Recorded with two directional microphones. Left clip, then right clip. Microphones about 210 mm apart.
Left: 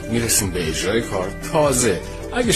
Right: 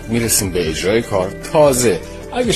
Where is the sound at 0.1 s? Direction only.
25° right (ahead or behind).